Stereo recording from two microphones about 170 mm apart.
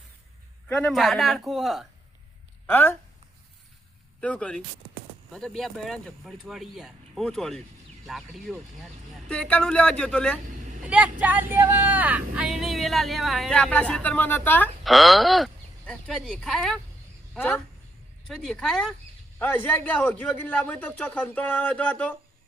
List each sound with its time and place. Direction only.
0.7 s a woman's voice: 5° left (ahead or behind)
2.6 s speech: 10° left (ahead or behind)
4.2 s a man's voice: 5° left (ahead or behind)
10.4 s speech: 50° right (ahead or behind)
10.8 s a woman's voice: 10° right (ahead or behind); by 14.7 s 10° left (ahead or behind)
14.8 s a woman's voice: centre (ahead or behind)
18.3 s a woman's voice: 5° left (ahead or behind)